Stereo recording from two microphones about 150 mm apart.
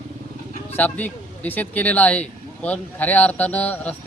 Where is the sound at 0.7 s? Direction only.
10° left (ahead or behind).